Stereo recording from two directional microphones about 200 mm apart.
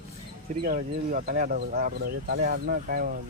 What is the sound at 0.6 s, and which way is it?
Speech, 45° right (ahead or behind).